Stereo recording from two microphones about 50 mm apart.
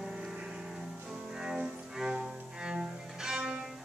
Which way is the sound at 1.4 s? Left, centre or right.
Centre.